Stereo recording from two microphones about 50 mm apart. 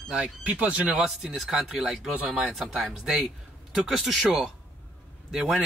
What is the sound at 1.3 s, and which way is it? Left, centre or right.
Speech, centre.